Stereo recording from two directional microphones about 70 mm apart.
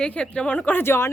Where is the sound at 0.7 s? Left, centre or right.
Left.